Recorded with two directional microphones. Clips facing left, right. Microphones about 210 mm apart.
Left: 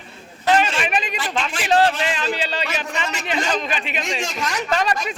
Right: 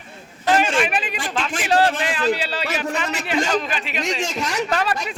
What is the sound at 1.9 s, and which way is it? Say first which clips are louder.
Speech: even; 55° right (ahead or behind).